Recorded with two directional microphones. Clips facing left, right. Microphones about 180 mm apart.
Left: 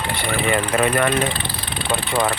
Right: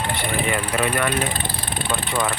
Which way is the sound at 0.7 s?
40° left (ahead or behind).